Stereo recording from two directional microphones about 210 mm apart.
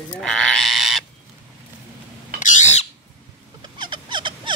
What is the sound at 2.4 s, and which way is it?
Bird, 35° left (ahead or behind).